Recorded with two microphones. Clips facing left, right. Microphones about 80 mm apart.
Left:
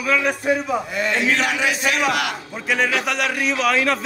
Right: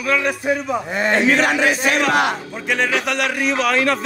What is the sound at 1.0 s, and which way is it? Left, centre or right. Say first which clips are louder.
Speech: right 6 dB; right.